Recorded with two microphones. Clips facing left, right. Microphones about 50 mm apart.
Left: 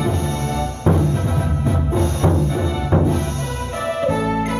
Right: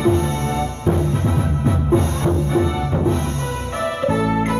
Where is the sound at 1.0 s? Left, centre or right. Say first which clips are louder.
Even; right.